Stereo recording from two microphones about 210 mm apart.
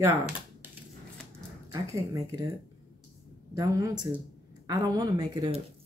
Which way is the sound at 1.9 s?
15° right (ahead or behind).